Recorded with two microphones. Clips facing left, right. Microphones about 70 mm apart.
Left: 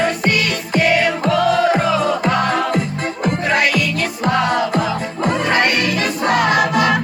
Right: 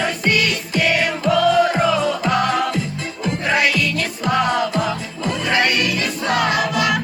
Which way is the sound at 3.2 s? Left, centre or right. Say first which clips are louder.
Left 2 dB; left.